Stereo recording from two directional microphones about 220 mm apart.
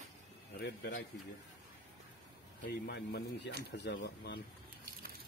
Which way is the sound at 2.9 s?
50° left (ahead or behind).